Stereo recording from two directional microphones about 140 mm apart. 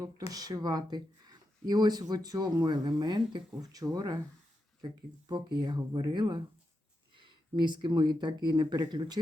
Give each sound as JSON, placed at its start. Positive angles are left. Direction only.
{"t": 0.3, "sound": "speech", "side_deg": -25}
{"t": 5.3, "sound": "speech", "side_deg": -30}